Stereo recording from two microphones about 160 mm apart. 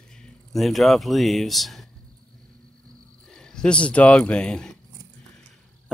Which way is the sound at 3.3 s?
5° left (ahead or behind).